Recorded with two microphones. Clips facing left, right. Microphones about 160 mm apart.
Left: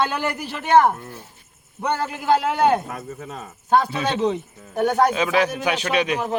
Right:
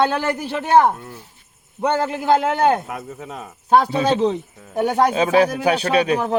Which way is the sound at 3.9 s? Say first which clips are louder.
Right 4 dB; 30° right (ahead or behind).